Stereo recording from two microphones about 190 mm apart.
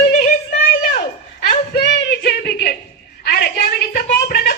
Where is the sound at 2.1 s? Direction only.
55° left (ahead or behind).